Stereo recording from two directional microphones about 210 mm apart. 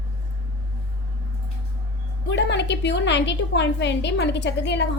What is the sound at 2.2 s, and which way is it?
A woman's voice, 55° left (ahead or behind).